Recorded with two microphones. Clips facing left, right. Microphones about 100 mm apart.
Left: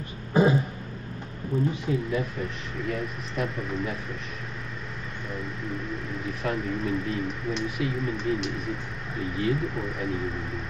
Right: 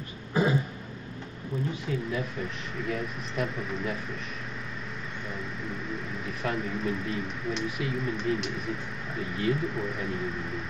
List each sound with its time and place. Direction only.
0.3 s throat clearing: 20° left (ahead or behind)
1.5 s speech: 35° left (ahead or behind)
2.8 s speech: centre (ahead or behind)
5.3 s speech: centre (ahead or behind)